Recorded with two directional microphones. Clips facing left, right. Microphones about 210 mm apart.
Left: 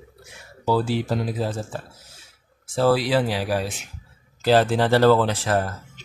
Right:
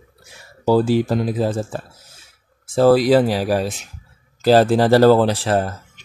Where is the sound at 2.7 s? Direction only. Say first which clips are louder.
Right 7 dB; 45° right (ahead or behind).